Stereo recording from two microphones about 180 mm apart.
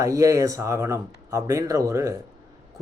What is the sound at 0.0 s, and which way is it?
Speech, 20° right (ahead or behind).